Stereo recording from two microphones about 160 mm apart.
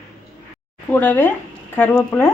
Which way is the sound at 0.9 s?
10° left (ahead or behind).